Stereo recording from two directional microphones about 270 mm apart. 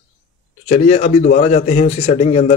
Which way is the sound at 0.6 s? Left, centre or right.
Left.